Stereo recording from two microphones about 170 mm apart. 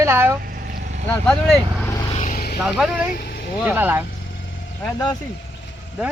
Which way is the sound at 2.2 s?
60° left (ahead or behind).